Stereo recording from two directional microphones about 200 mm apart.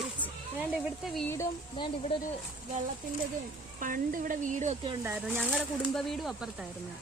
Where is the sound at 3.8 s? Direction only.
45° right (ahead or behind).